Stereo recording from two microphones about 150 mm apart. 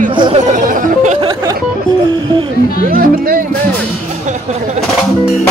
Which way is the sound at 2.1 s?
30° right (ahead or behind).